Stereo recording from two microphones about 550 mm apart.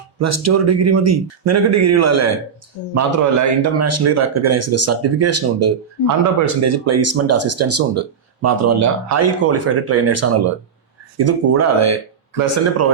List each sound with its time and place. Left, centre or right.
0.2 s speech: right